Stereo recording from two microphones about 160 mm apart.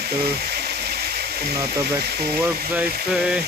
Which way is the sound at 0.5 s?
80° right.